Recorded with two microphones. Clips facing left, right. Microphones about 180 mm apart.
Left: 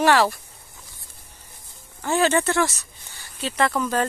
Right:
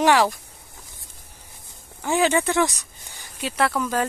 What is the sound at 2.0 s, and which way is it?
Speech, 15° right (ahead or behind).